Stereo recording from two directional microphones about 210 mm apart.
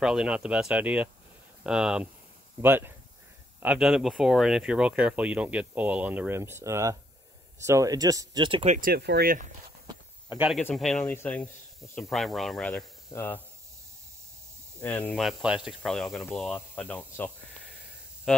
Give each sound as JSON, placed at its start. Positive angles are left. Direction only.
{"t": 0.0, "sound": "speech", "side_deg": -5}
{"t": 8.7, "sound": "speech", "side_deg": -45}
{"t": 9.8, "sound": "a sound", "side_deg": -10}
{"t": 10.5, "sound": "speech", "side_deg": 0}
{"t": 14.8, "sound": "speech", "side_deg": 5}